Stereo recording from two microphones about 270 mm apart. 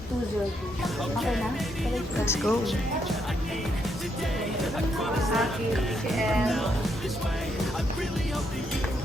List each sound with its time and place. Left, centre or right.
2.2 s speech: centre
4.6 s speech: centre